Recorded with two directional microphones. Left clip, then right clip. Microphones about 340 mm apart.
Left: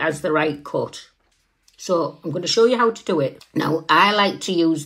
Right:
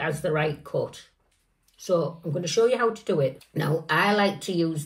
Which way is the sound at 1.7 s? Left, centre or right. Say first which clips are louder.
Left 4 dB; left.